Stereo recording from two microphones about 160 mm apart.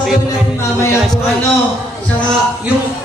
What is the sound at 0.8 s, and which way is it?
Speech, 15° left (ahead or behind).